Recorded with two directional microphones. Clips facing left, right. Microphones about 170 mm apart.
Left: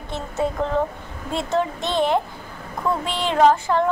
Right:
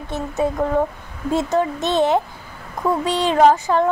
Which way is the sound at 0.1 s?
15° right (ahead or behind).